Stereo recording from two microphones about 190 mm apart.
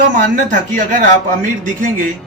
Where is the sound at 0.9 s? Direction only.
45° right (ahead or behind).